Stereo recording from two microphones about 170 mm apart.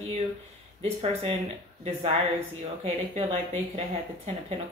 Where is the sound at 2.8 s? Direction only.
35° right (ahead or behind).